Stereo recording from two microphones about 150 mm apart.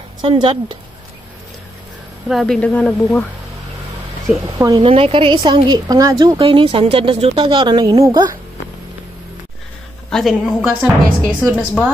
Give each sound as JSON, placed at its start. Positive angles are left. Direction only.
{"t": 0.2, "sound": "a woman's voice", "side_deg": -35}
{"t": 2.2, "sound": "speech", "side_deg": 0}
{"t": 4.6, "sound": "speech", "side_deg": -25}
{"t": 4.8, "sound": "a woman's voice", "side_deg": -40}
{"t": 10.0, "sound": "speech", "side_deg": 0}